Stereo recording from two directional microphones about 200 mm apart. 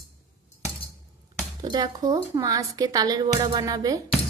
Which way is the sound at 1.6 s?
20° right (ahead or behind).